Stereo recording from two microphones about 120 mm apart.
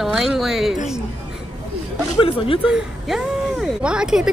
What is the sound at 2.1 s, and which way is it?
Speech, 50° left (ahead or behind).